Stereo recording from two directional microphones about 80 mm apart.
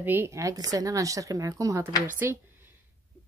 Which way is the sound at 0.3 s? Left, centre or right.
Right.